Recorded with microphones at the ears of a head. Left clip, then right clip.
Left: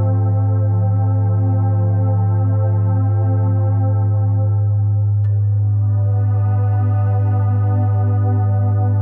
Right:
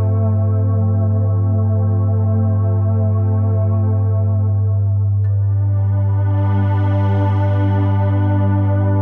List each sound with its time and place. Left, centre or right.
6.4 s music: right